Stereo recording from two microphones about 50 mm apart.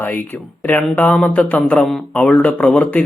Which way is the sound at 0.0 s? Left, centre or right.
Left.